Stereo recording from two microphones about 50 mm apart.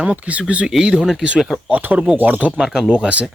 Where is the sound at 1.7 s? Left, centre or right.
Right.